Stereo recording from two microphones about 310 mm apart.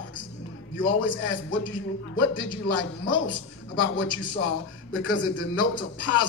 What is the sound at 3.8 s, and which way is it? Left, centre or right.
A man's voice, left.